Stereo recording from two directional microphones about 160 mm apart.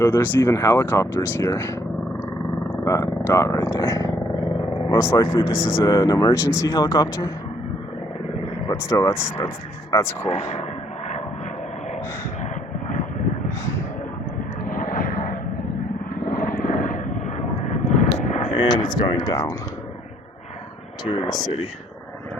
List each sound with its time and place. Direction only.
0.0 s speech: 15° left (ahead or behind)
2.8 s speech: 20° left (ahead or behind)
8.6 s speech: 15° left (ahead or behind)
10.2 s speech: 45° left (ahead or behind)
14.7 s vehicle: 60° left (ahead or behind)
18.5 s speech: 30° left (ahead or behind)
21.0 s speech: 30° left (ahead or behind)